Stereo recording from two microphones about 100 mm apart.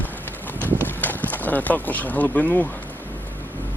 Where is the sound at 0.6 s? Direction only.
20° right (ahead or behind).